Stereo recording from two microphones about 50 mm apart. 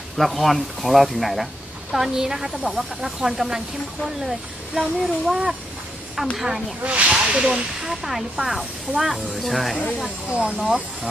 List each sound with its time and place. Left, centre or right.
0.2 s speech: centre
6.8 s speech: right
7.9 s speech: centre
10.3 s speech: right